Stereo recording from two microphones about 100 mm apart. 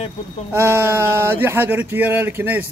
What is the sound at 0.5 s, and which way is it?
Speech, 25° right (ahead or behind).